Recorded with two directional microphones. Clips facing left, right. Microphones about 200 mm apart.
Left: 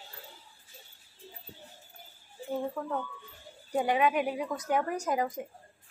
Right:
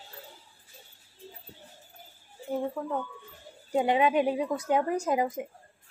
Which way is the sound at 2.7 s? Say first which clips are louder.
Right 2 dB; 10° right (ahead or behind).